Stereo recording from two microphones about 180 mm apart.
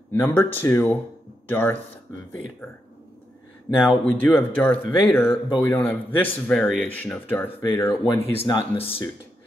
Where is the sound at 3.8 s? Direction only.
10° left (ahead or behind).